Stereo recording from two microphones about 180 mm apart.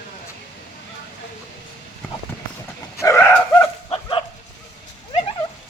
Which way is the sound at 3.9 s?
25° left (ahead or behind).